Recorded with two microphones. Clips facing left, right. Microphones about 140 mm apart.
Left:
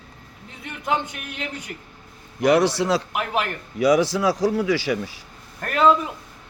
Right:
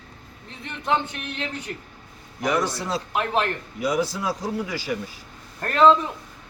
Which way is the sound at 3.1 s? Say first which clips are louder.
Right 1 dB; 10° left (ahead or behind).